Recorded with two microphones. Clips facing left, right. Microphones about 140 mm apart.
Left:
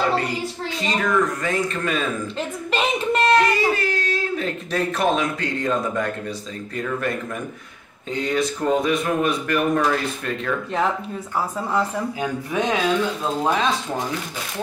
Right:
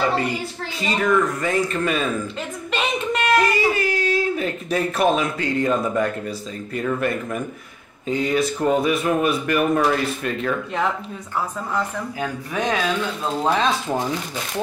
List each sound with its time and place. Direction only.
0.7 s speech: 5° right (ahead or behind)
2.7 s a sound: centre (ahead or behind)
6.7 s speech: 5° right (ahead or behind)
12.5 s speech: 20° left (ahead or behind)
13.2 s speech: centre (ahead or behind)